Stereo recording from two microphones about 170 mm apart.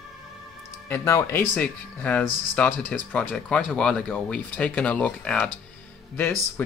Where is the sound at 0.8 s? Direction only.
15° left (ahead or behind).